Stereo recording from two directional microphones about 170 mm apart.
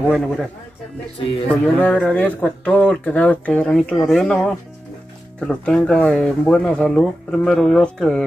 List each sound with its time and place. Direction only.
0.1 s speech: centre (ahead or behind)
1.2 s speech: 30° left (ahead or behind)
1.8 s speech: 10° left (ahead or behind)